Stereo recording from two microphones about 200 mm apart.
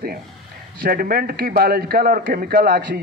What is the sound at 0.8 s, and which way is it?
A man's voice, 45° right (ahead or behind).